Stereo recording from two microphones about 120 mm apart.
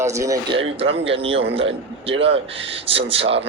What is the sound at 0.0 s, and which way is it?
Speech, 25° right (ahead or behind).